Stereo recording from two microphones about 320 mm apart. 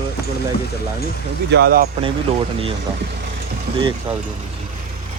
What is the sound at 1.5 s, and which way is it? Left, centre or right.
Speech, right.